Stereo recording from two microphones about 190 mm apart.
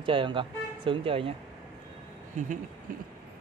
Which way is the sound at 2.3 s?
40° right (ahead or behind).